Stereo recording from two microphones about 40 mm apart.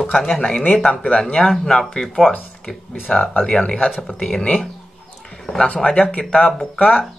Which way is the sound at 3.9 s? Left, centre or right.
Centre.